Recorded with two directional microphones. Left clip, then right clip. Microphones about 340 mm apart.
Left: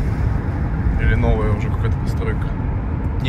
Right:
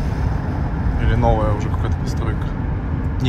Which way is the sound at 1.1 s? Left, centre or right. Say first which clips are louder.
Right 4 dB; centre.